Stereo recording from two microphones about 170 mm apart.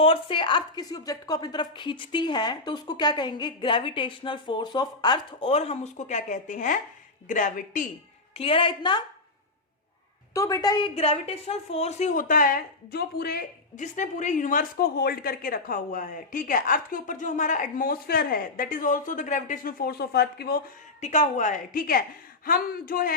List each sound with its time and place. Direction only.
0.0 s a woman's voice: 30° left (ahead or behind); by 7.9 s 50° left (ahead or behind)
8.3 s a woman's voice: 35° left (ahead or behind)
10.3 s a woman's voice: 20° left (ahead or behind); by 13.8 s 65° left (ahead or behind)
13.8 s speech: 45° left (ahead or behind); by 20.6 s 65° left (ahead or behind)
21.0 s a man's voice: 45° left (ahead or behind); by 23.1 s 60° left (ahead or behind)